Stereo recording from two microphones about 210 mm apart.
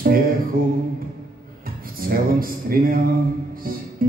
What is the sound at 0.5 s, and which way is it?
Music, 45° right (ahead or behind).